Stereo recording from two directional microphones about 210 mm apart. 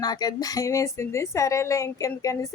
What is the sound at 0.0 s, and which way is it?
Speech, 20° left (ahead or behind).